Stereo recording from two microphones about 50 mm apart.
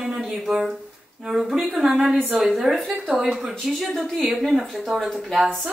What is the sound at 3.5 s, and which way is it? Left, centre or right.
Speech, centre.